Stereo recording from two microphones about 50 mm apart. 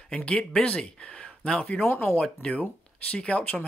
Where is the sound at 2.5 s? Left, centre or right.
Left.